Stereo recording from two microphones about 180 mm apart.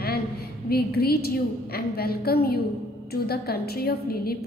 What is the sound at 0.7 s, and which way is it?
A woman's voice, 60° left (ahead or behind).